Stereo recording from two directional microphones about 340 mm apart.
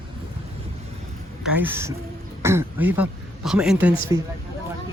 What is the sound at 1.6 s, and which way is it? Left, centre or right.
A man's voice, centre.